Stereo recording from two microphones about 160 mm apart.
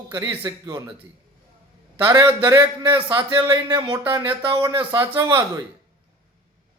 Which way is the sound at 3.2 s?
30° right (ahead or behind).